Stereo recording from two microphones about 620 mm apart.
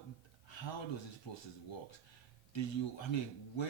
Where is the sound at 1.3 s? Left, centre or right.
Left.